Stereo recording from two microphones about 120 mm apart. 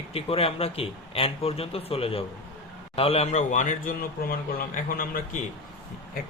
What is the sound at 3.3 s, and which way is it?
Speech, 90° left.